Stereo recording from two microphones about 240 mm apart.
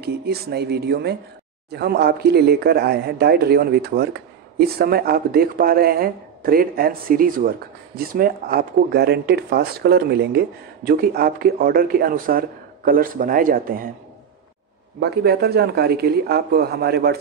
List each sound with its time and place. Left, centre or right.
0.0 s speech: right
15.0 s speech: right